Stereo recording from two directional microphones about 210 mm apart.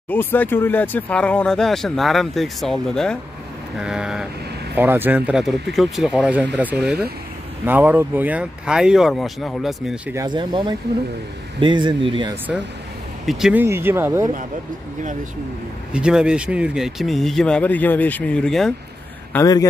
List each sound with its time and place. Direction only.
0.1 s speech: 10° left (ahead or behind)
10.1 s speech: 20° right (ahead or behind)
13.2 s speech: centre (ahead or behind)
15.9 s speech: 5° right (ahead or behind)
19.3 s a man's voice: 15° left (ahead or behind)